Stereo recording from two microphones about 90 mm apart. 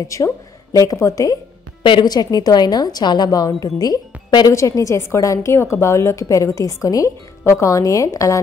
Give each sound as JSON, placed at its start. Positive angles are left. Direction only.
{"t": 0.1, "sound": "a woman's voice", "side_deg": 35}
{"t": 1.8, "sound": "a woman's voice", "side_deg": 65}
{"t": 2.0, "sound": "a woman's voice", "side_deg": 45}
{"t": 4.5, "sound": "a woman's voice", "side_deg": 35}